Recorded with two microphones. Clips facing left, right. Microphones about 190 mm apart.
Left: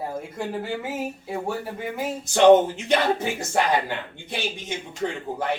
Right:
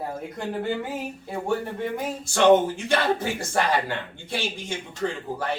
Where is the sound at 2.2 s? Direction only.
20° left (ahead or behind).